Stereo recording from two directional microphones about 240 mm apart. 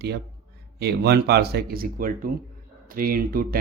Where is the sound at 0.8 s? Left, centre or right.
Right.